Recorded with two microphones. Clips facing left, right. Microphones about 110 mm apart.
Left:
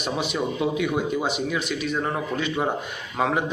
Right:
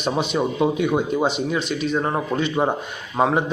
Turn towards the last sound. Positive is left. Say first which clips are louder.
# right 4 dB
turn(degrees=-30)  # may be behind; listen again after turning